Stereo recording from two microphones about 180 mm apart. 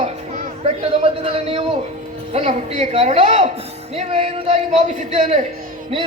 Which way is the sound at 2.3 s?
35° right (ahead or behind).